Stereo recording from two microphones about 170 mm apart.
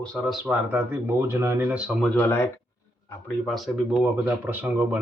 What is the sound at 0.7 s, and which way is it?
Speech, 10° right (ahead or behind).